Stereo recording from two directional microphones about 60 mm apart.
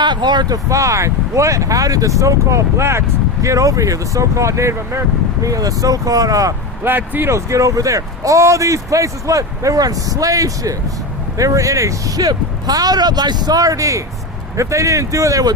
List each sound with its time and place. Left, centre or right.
0.4 s speech: right
3.4 s speech: right
5.4 s speech: right
6.8 s speech: right
7.3 s speech: right